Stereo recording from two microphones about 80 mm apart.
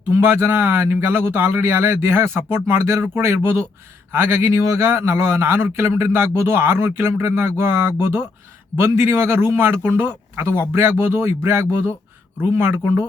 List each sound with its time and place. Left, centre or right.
0.1 s a man's voice: right